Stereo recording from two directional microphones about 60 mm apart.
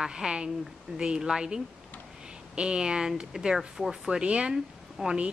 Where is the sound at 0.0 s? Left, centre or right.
Centre.